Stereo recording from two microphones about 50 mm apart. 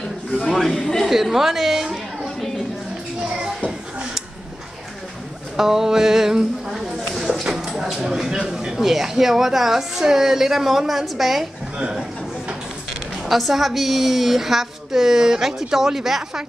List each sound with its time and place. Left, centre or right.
0.5 s speech: centre
1.0 s a woman's voice: centre
2.2 s a sound: centre
3.3 s a sound: centre
5.6 s a woman's voice: centre
13.3 s a woman's voice: centre